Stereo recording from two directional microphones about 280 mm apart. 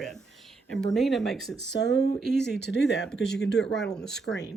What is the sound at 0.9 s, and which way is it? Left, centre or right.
Speech, centre.